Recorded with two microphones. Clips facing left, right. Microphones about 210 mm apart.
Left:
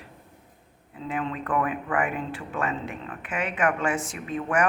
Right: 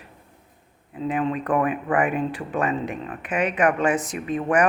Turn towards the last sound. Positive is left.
turn(degrees=-20)  # may be behind; listen again after turning